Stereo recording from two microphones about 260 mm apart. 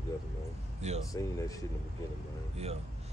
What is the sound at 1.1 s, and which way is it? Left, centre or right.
Speech, centre.